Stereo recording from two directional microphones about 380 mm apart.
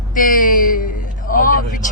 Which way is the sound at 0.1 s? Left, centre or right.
Left.